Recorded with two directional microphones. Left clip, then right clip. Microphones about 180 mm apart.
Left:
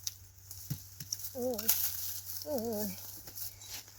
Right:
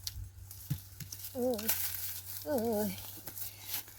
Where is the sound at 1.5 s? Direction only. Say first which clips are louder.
Even; 10° right (ahead or behind).